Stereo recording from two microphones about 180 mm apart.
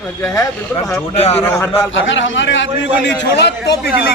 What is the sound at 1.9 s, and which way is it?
A man's voice, 90° left.